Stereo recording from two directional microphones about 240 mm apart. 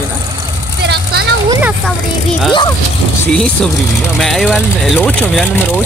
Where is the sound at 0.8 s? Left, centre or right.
Right.